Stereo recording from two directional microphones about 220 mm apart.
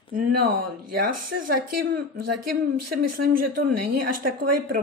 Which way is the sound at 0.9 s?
45° right (ahead or behind).